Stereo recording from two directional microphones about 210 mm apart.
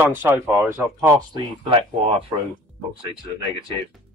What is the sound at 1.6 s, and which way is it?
Speech, 25° right (ahead or behind).